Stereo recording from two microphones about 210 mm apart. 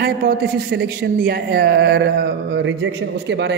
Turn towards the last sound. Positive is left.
turn(degrees=-55)  # may be behind; listen again after turning